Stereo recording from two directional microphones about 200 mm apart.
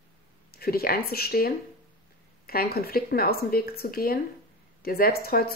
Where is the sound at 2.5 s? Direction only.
50° left (ahead or behind).